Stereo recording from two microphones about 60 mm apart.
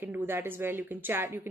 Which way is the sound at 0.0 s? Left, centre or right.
Right.